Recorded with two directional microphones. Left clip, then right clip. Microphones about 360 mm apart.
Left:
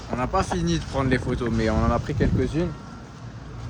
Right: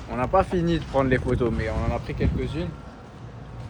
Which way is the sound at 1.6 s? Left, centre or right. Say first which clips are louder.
Left 5 dB; left.